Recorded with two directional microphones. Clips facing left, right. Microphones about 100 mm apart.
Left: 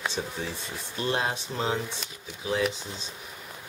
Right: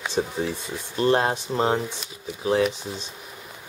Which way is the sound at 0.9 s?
45° right (ahead or behind).